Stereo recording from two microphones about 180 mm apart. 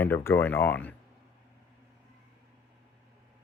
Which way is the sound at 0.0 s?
10° left (ahead or behind).